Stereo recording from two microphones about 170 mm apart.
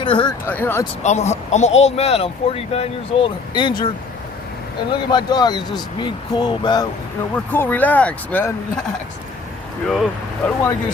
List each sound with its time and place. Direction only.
0.0 s speech: 30° left (ahead or behind)
0.4 s speech: 15° left (ahead or behind)
1.0 s speech: 40° left (ahead or behind)
4.9 s speech: 25° left (ahead or behind)
7.3 s speech: 10° left (ahead or behind)
10.4 s speech: 15° left (ahead or behind)